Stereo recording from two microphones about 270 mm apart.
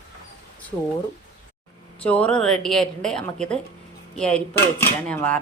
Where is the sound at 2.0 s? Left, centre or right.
Centre.